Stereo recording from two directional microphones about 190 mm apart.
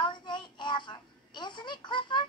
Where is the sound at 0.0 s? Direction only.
25° left (ahead or behind).